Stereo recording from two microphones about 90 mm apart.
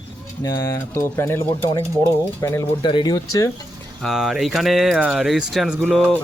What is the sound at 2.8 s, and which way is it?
Speech, 55° left (ahead or behind).